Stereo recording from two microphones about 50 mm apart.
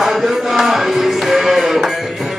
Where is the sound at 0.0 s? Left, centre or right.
Centre.